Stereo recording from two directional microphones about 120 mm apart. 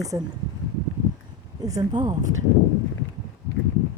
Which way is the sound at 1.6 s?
30° right (ahead or behind).